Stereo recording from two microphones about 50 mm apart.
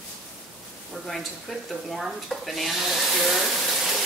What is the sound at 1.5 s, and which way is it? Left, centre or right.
Speech, centre.